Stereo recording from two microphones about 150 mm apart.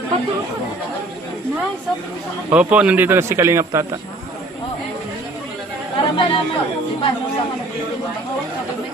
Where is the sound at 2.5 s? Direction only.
10° right (ahead or behind).